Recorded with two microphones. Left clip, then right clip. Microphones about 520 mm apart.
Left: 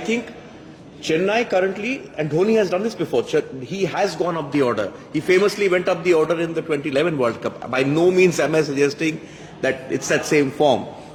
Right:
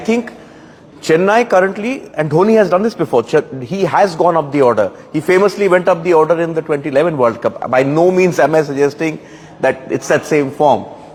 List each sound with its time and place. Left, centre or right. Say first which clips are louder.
1.1 s a man's voice: right 8 dB; right